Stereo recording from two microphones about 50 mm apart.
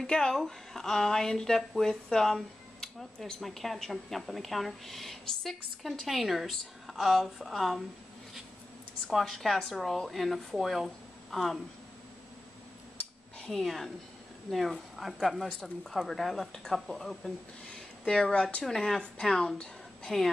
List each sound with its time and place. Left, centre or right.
0.0 s a woman's voice: centre
9.1 s speech: centre
13.5 s speech: centre
18.0 s a woman's voice: centre
18.6 s a woman's voice: centre